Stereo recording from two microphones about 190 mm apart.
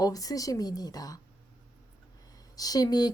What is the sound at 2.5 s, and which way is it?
Speech, 20° left (ahead or behind).